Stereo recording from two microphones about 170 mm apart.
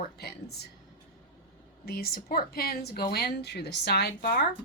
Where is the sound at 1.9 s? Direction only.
65° left (ahead or behind).